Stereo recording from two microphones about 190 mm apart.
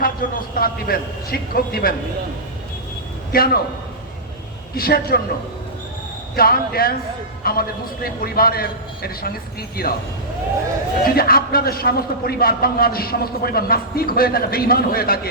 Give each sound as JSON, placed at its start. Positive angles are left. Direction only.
{"t": 0.0, "sound": "a man's voice", "side_deg": 50}
{"t": 3.3, "sound": "a man's voice", "side_deg": 50}
{"t": 4.7, "sound": "a man's voice", "side_deg": 55}
{"t": 6.3, "sound": "a man's voice", "side_deg": 50}
{"t": 11.0, "sound": "a man's voice", "side_deg": 50}